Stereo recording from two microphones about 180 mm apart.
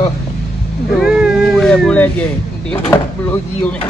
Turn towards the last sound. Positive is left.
turn(degrees=10)  # may be behind; listen again after turning